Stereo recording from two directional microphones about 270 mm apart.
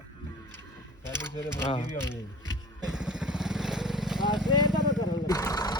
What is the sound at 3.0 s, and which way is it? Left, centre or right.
Vehicle, centre.